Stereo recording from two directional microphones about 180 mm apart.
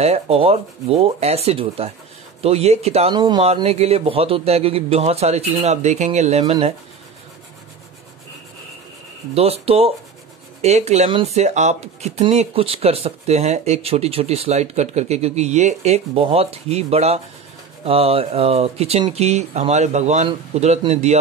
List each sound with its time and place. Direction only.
0.0 s speech: 35° right (ahead or behind)
9.3 s speech: 35° right (ahead or behind)